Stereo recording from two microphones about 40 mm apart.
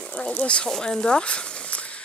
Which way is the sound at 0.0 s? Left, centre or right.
Left.